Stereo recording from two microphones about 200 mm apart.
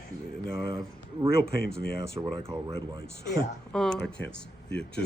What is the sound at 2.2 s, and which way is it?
Speech, 15° right (ahead or behind).